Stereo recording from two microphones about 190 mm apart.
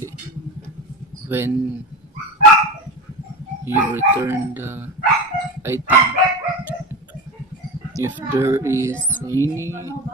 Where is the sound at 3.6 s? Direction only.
10° right (ahead or behind).